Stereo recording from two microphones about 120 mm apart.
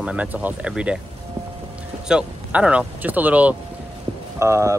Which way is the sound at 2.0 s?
10° right (ahead or behind).